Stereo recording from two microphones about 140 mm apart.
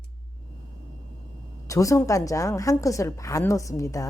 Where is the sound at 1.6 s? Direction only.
25° left (ahead or behind).